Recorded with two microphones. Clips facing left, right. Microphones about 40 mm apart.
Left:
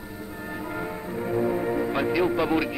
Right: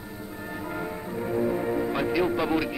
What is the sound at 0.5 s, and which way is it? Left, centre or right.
A man's voice, centre.